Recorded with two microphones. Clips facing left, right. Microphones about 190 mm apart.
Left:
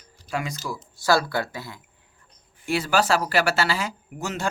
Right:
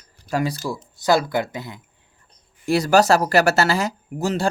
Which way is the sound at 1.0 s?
20° right (ahead or behind).